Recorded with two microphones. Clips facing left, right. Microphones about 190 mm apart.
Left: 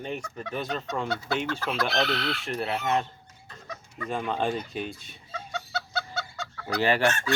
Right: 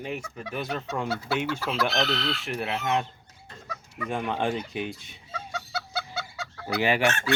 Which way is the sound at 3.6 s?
10° right (ahead or behind).